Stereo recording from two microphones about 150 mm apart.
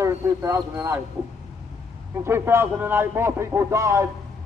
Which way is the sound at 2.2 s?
15° right (ahead or behind).